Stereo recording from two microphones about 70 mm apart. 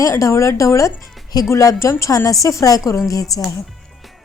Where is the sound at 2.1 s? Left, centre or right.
Left.